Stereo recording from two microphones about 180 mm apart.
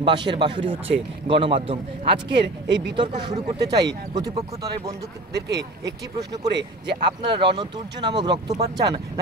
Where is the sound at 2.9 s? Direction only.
25° right (ahead or behind).